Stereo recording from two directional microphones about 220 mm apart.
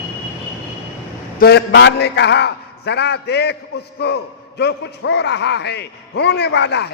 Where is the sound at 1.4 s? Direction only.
50° left (ahead or behind).